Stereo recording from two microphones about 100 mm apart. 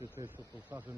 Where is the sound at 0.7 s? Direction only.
15° right (ahead or behind).